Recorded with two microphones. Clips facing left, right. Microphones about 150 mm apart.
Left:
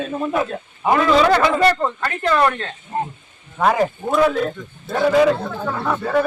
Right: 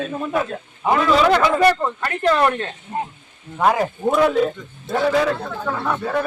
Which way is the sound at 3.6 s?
Centre (ahead or behind).